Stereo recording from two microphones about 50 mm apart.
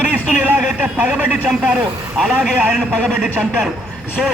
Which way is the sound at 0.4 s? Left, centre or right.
Right.